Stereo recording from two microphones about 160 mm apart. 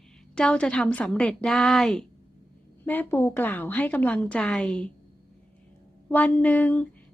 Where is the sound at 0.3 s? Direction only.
5° left (ahead or behind).